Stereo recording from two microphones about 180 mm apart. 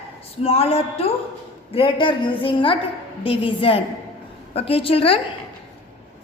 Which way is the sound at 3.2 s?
30° left (ahead or behind).